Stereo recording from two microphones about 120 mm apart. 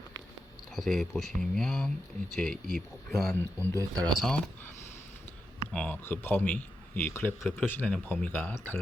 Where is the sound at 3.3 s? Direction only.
20° left (ahead or behind).